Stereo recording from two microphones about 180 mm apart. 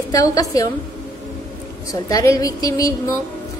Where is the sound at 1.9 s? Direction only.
20° left (ahead or behind).